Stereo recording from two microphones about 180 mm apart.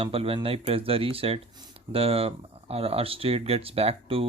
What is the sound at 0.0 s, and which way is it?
Speech, 30° right (ahead or behind).